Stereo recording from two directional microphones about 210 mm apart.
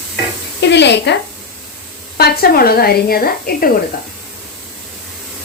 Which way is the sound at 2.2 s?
50° left (ahead or behind).